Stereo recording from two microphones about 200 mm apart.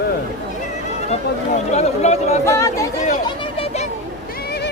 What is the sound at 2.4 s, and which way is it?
Speech, 15° left (ahead or behind).